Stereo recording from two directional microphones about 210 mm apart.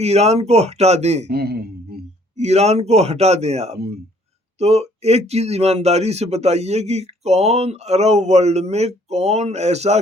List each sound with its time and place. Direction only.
0.0 s speech: 30° right (ahead or behind)
1.3 s a man's voice: 50° right (ahead or behind)
2.4 s speech: 30° right (ahead or behind)